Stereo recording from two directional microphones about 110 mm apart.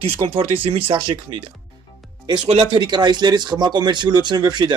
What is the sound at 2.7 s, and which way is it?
Speech, 40° right (ahead or behind).